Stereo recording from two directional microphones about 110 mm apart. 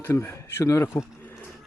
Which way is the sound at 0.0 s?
20° left (ahead or behind).